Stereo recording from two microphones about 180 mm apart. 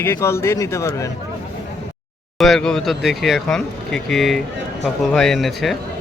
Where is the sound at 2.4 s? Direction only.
Centre (ahead or behind).